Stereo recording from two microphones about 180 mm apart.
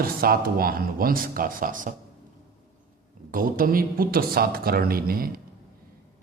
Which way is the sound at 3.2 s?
50° right (ahead or behind).